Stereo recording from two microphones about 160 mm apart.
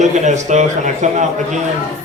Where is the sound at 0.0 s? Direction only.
50° right (ahead or behind).